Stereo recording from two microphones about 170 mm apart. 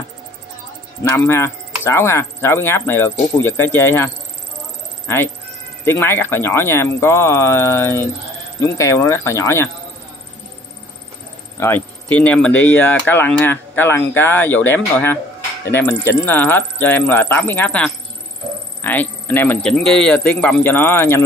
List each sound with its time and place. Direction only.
1.0 s speech: 15° left (ahead or behind)
11.6 s speech: 10° left (ahead or behind)